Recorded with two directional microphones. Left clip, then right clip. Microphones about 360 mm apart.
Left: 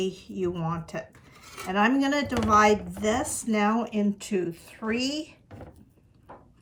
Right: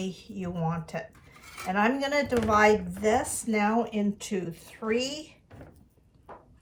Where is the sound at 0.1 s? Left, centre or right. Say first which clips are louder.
Left 5 dB; left.